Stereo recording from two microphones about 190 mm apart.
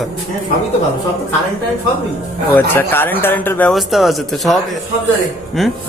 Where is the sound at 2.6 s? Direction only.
10° left (ahead or behind).